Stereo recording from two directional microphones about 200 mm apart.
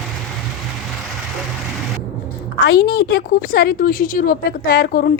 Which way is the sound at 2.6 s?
55° left (ahead or behind).